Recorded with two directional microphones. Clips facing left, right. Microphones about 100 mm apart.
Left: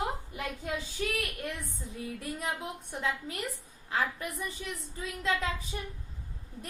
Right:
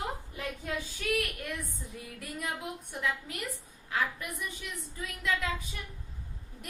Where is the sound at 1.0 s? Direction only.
30° left (ahead or behind).